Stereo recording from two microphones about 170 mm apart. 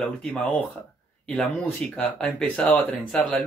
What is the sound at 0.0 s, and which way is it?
Speech, 5° left (ahead or behind).